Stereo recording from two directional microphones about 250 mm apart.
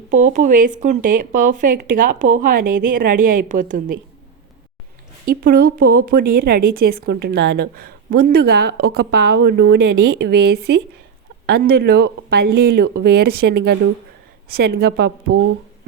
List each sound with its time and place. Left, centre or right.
0.3 s speech: right
5.2 s speech: right